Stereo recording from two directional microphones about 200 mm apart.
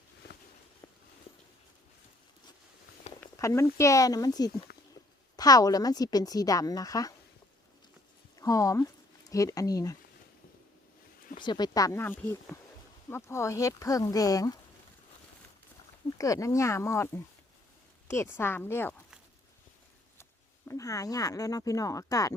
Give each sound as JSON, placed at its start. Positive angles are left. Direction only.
{"t": 3.2, "sound": "a sound", "side_deg": 15}
{"t": 3.8, "sound": "a woman's voice", "side_deg": 15}
{"t": 8.4, "sound": "speech", "side_deg": 15}
{"t": 11.4, "sound": "speech", "side_deg": 20}
{"t": 16.1, "sound": "speech", "side_deg": 15}
{"t": 20.7, "sound": "speech", "side_deg": 15}